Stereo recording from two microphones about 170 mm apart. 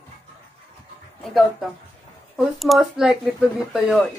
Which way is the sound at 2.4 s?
Centre (ahead or behind).